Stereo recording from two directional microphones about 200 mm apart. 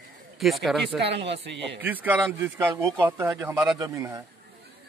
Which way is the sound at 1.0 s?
60° right (ahead or behind).